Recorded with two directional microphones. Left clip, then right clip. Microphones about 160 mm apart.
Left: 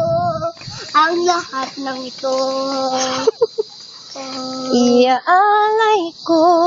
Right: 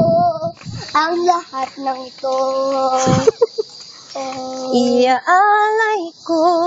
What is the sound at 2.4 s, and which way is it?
Speech, 5° left (ahead or behind).